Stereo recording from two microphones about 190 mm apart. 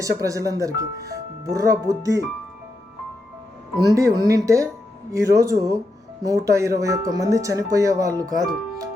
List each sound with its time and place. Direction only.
0.0 s speech: 15° right (ahead or behind)
3.9 s speech: 15° right (ahead or behind)